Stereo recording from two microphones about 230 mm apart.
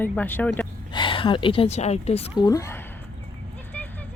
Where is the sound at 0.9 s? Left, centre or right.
Left.